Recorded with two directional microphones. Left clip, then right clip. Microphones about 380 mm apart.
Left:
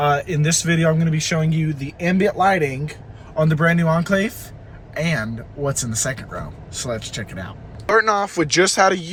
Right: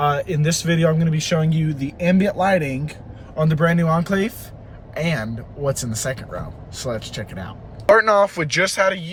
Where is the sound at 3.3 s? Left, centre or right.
Centre.